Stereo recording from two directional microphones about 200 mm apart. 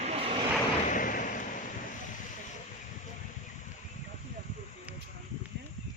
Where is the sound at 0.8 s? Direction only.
40° left (ahead or behind).